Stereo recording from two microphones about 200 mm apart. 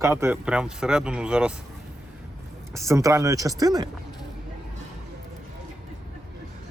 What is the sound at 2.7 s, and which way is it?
Speech, 15° right (ahead or behind).